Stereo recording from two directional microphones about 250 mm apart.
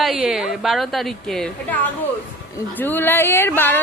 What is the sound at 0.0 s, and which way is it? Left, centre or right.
A woman's voice, centre.